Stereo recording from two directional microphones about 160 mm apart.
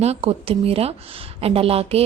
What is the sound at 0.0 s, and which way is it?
A woman's voice, 40° right (ahead or behind).